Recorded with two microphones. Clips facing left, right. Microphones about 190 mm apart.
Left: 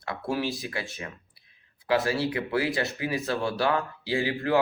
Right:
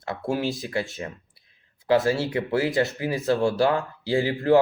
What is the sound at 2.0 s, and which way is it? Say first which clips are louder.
Speech: right 4 dB; 25° right (ahead or behind).